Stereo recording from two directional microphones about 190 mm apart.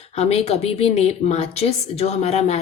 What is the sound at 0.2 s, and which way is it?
Speech, 35° left (ahead or behind).